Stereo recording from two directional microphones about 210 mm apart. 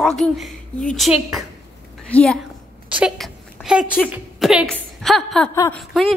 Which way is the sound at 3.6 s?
5° right (ahead or behind).